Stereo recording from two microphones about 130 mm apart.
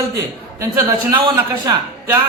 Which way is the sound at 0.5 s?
20° right (ahead or behind).